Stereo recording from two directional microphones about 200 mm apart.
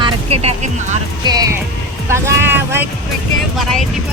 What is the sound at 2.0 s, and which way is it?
Vehicle, 15° right (ahead or behind).